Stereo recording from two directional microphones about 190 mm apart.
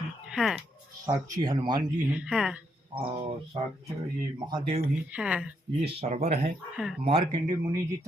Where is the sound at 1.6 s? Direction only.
25° right (ahead or behind).